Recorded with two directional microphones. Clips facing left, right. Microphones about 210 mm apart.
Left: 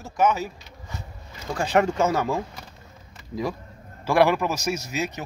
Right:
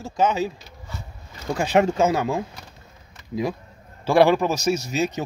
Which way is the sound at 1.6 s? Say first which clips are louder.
Right 2 dB; 20° right (ahead or behind).